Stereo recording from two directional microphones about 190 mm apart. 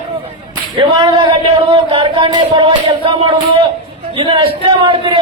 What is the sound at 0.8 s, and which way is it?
A man's voice, 25° right (ahead or behind).